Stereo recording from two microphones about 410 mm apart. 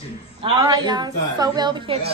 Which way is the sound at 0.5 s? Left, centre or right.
Centre.